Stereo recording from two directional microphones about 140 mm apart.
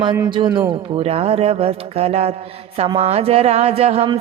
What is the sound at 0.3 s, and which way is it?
Speech, 35° right (ahead or behind).